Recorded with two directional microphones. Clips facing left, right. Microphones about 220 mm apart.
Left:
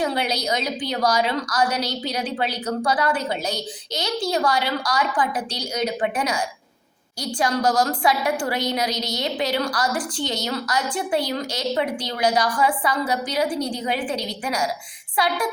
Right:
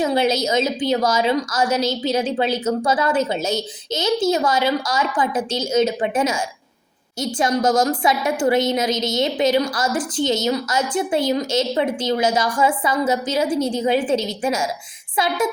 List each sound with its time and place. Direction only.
0.0 s a woman's voice: 25° right (ahead or behind)